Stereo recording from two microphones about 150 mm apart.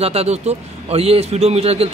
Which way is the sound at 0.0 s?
45° right (ahead or behind).